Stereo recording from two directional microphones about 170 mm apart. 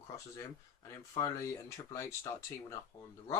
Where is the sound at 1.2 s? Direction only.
20° left (ahead or behind).